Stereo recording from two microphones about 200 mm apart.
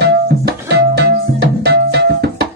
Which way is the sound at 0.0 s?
55° right (ahead or behind).